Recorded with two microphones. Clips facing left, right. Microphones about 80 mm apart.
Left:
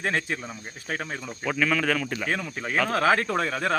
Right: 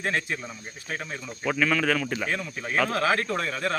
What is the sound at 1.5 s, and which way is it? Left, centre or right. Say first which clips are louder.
Speech: right 1 dB; centre.